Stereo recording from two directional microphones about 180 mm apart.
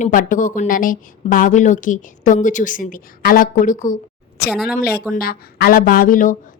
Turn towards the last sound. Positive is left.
turn(degrees=50)  # may be behind; listen again after turning